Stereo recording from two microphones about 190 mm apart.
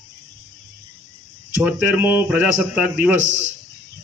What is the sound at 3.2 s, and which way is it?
Speech, 40° right (ahead or behind).